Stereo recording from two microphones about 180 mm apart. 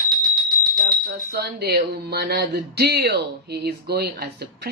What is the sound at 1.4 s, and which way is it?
Speech, 60° right (ahead or behind).